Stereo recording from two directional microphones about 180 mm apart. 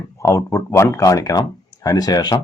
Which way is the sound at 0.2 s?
15° left (ahead or behind).